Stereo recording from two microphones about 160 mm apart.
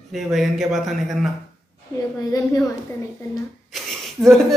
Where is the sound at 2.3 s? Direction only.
20° left (ahead or behind).